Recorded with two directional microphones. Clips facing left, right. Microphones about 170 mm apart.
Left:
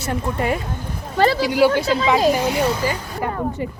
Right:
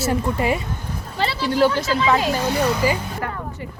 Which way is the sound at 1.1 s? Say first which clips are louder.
Left 8 dB; 45° left (ahead or behind).